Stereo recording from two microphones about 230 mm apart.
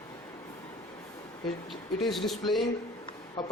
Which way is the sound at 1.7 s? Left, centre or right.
Centre.